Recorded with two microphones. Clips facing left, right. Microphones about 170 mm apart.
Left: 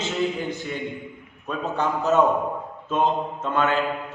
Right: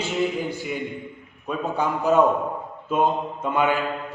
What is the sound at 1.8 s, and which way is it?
Speech, 10° right (ahead or behind).